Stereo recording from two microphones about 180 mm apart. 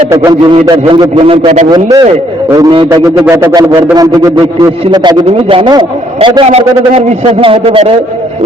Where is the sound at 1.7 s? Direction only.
20° right (ahead or behind).